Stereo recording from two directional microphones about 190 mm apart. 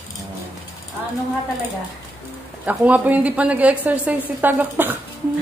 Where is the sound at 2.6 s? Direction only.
10° right (ahead or behind).